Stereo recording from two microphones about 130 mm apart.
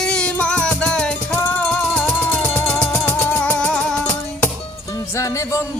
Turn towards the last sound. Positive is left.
turn(degrees=10)  # may be behind; listen again after turning